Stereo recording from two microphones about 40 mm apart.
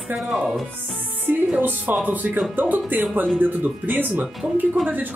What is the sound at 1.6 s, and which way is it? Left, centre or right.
Speech, right.